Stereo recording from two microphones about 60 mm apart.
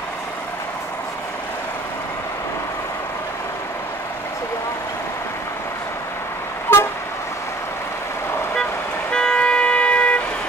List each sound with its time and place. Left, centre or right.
6.7 s vehicle: left
9.1 s vehicle: centre